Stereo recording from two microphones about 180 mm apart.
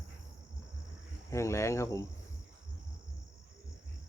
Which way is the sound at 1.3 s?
15° left (ahead or behind).